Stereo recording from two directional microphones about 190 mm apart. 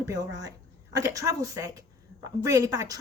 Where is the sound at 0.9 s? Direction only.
20° right (ahead or behind).